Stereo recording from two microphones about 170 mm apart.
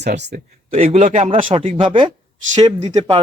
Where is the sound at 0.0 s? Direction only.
75° right (ahead or behind).